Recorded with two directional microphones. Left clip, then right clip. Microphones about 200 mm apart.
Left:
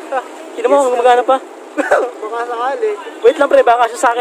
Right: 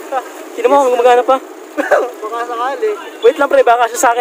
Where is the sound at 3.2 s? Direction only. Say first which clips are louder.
Even; 10° right (ahead or behind).